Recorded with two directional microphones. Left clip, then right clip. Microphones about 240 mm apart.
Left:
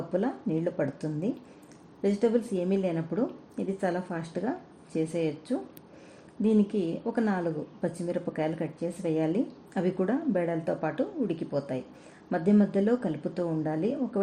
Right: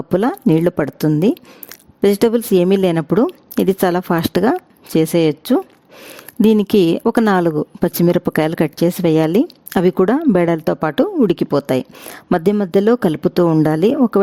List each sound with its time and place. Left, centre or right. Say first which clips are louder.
0.1 s speech: right 15 dB; right